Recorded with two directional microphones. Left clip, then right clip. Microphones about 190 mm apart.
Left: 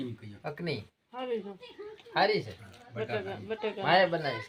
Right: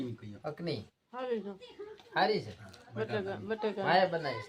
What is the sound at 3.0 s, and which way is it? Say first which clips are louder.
Speech: left 1 dB; centre (ahead or behind).